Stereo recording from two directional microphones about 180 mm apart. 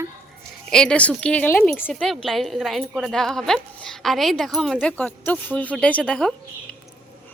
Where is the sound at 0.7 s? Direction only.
5° left (ahead or behind).